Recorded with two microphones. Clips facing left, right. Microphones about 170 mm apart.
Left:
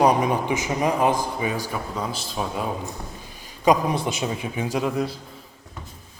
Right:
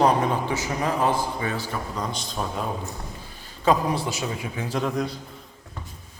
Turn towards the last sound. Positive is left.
turn(degrees=5)  # may be behind; listen again after turning